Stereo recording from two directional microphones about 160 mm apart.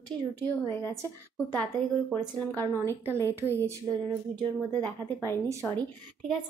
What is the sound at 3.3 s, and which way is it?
Speech, 15° right (ahead or behind).